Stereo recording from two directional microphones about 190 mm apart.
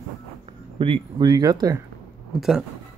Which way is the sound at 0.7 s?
25° right (ahead or behind).